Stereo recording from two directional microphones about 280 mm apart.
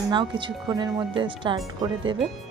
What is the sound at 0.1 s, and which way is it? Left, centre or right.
A woman's voice, centre.